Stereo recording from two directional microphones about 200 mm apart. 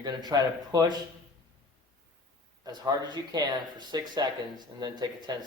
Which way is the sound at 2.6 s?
20° right (ahead or behind).